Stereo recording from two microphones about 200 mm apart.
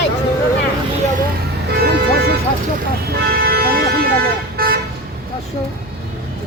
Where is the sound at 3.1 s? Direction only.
50° right (ahead or behind).